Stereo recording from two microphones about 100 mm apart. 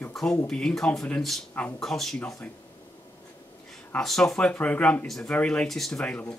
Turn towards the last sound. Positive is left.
turn(degrees=10)  # may be behind; listen again after turning